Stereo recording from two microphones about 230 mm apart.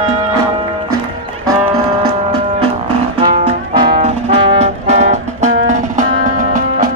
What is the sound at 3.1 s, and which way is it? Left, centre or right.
Music, right.